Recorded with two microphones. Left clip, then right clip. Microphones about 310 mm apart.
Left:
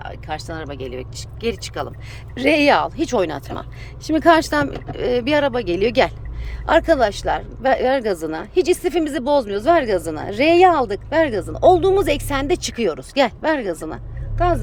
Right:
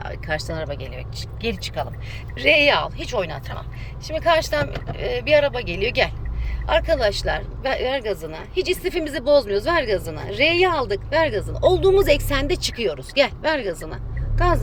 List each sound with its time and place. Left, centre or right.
0.0 s speech: centre
2.3 s speech: centre